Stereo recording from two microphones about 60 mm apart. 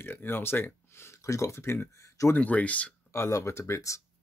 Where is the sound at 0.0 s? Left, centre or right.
Left.